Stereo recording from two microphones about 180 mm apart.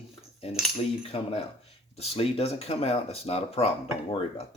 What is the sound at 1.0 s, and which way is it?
Speech, 35° left (ahead or behind).